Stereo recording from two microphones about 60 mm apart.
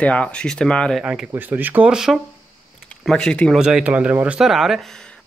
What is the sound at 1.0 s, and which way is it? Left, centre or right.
Speech, centre.